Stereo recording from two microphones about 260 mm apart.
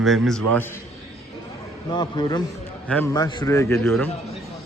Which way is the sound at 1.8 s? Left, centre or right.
Centre.